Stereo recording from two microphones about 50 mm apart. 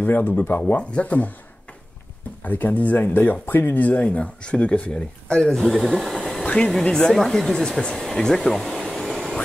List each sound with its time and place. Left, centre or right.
0.0 s speech: left
0.7 s speech: left
2.4 s speech: left
4.0 s speech: left; by 6.4 s centre
6.4 s a sound: left
6.8 s speech: centre
8.4 s hair dryer: centre